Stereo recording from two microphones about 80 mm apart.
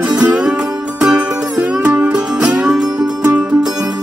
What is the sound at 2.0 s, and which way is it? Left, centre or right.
Music, centre.